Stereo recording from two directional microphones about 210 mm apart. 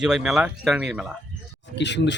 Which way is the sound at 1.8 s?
55° left (ahead or behind).